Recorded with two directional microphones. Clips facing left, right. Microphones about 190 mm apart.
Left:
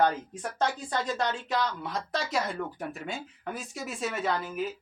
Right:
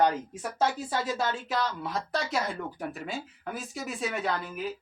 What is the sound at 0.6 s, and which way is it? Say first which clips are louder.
Speech: right 1 dB; 5° right (ahead or behind).